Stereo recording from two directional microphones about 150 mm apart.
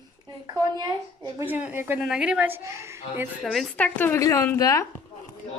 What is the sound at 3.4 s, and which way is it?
A woman's voice, centre (ahead or behind).